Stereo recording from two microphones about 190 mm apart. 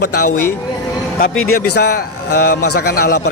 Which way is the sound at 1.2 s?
55° left (ahead or behind).